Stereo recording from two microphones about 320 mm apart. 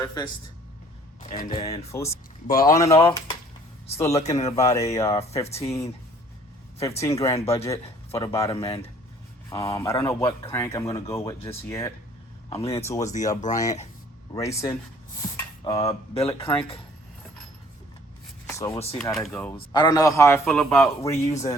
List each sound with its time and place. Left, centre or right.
0.0 s a man's voice: centre
2.5 s speech: left
2.7 s a man's voice: centre
18.9 s speech: centre
19.5 s a man's voice: centre